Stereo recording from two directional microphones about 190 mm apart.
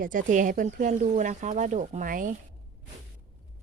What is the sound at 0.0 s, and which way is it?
Speech, 45° right (ahead or behind).